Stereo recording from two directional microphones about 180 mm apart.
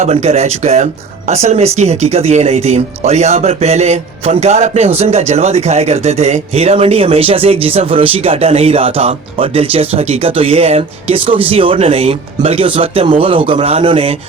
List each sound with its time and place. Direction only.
0.0 s speech: 35° right (ahead or behind)